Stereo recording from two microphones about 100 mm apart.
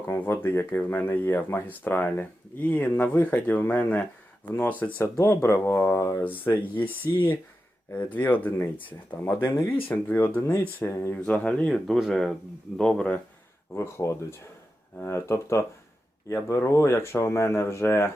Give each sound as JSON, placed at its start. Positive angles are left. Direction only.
{"t": 0.1, "sound": "speech", "side_deg": 25}
{"t": 5.0, "sound": "speech", "side_deg": 30}
{"t": 6.2, "sound": "speech", "side_deg": 20}
{"t": 11.2, "sound": "speech", "side_deg": 10}
{"t": 13.7, "sound": "speech", "side_deg": 25}